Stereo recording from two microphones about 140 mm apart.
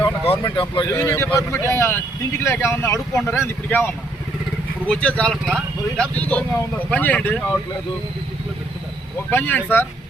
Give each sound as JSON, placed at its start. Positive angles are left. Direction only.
{"t": 0.0, "sound": "speech", "side_deg": 35}
{"t": 0.9, "sound": "speech", "side_deg": 20}
{"t": 9.3, "sound": "speech", "side_deg": 15}